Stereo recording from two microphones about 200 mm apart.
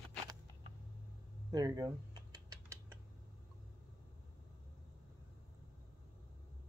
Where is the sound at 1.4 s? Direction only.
20° right (ahead or behind).